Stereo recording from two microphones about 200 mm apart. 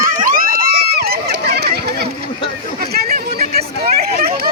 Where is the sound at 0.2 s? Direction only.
45° right (ahead or behind).